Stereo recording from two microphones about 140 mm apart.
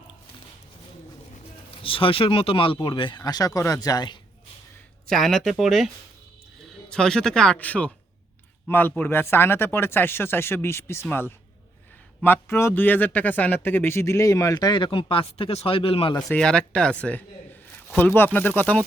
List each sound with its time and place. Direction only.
1.8 s speech: 40° left (ahead or behind)
5.0 s a man's voice: centre (ahead or behind); by 16.1 s 40° left (ahead or behind)
16.3 s speech: 5° left (ahead or behind)